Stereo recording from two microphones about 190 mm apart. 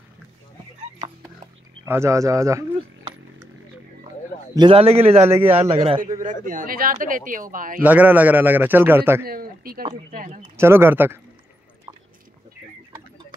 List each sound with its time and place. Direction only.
1.9 s speech: 15° right (ahead or behind)
4.6 s a man's voice: 30° right (ahead or behind)
5.2 s a man's voice: 10° right (ahead or behind)
5.6 s a man's voice: 30° right (ahead or behind)
6.2 s speech: 45° right (ahead or behind)
7.8 s a man's voice: 10° right (ahead or behind)
9.2 s a sound: 50° right (ahead or behind)
10.1 s speech: 45° right (ahead or behind)
10.6 s a man's voice: 15° right (ahead or behind)